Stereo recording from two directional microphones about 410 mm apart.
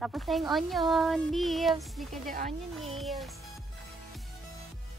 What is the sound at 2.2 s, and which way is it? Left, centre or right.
Speech, centre.